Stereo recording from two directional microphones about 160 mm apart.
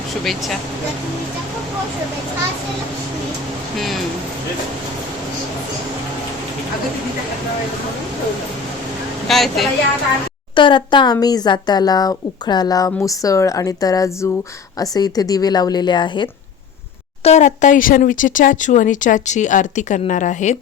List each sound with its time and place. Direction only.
9.2 s a woman's voice: centre (ahead or behind)
10.5 s speech: 30° left (ahead or behind)
17.2 s speech: 45° left (ahead or behind)